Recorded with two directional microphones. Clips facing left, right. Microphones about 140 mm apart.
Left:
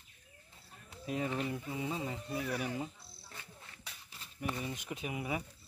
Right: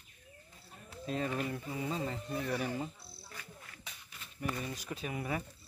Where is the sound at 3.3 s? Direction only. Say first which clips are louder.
Right 1 dB; 25° left (ahead or behind).